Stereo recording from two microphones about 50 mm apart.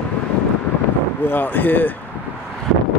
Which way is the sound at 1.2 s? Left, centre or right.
Left.